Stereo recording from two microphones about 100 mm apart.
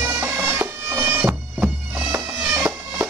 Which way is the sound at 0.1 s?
10° right (ahead or behind).